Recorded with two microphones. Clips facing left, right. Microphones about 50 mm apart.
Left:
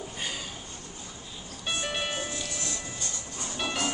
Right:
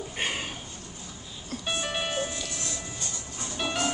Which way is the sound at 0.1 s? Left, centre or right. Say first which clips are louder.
Right 5 dB; right.